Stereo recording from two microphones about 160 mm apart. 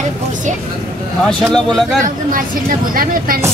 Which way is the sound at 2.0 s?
60° right (ahead or behind).